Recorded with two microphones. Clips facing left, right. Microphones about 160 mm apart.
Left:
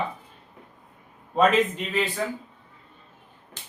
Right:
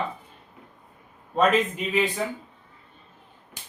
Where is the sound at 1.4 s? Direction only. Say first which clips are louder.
Left 1 dB; 5° right (ahead or behind).